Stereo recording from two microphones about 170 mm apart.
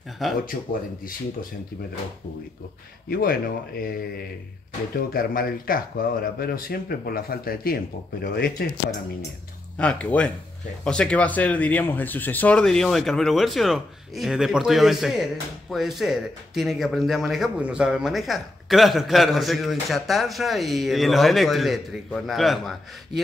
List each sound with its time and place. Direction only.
0.2 s a man's voice: centre (ahead or behind)
3.1 s speech: 60° left (ahead or behind)
9.8 s a man's voice: 5° left (ahead or behind)